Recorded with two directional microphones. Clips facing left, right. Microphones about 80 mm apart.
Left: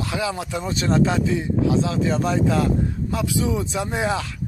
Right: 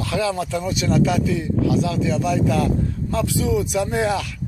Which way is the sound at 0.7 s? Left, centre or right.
Left.